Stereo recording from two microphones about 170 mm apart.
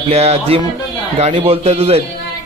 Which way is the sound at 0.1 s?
40° right (ahead or behind).